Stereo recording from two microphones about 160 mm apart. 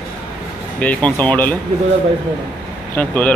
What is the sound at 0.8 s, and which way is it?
Speech, 10° left (ahead or behind).